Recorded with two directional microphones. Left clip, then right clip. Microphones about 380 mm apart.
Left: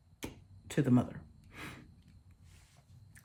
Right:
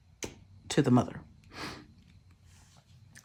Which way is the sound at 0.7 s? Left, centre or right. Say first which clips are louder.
Right 5 dB; centre.